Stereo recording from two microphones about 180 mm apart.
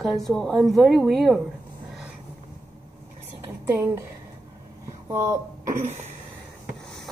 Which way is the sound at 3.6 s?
15° right (ahead or behind).